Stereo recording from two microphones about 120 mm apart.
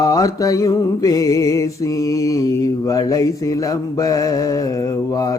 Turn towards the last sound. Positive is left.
turn(degrees=30)  # may be behind; listen again after turning